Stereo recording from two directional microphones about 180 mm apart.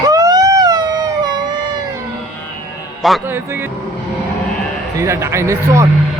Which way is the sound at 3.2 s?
10° right (ahead or behind).